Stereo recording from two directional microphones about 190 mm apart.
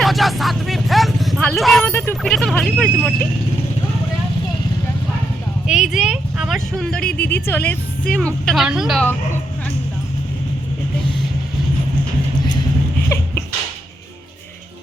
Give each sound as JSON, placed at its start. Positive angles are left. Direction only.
{"t": 0.0, "sound": "speech", "side_deg": 0}
{"t": 5.6, "sound": "a woman's voice", "side_deg": -5}
{"t": 7.2, "sound": "a woman's voice", "side_deg": 60}
{"t": 7.4, "sound": "a woman's voice", "side_deg": 10}